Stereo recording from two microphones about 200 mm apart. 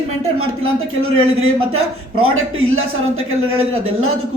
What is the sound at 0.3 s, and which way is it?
A man's voice, 90° right.